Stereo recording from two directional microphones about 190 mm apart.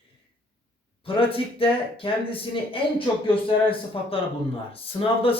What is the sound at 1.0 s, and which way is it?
Speech, 30° left (ahead or behind).